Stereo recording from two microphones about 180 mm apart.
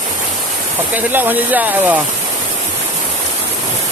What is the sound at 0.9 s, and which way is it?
Speech, 10° right (ahead or behind).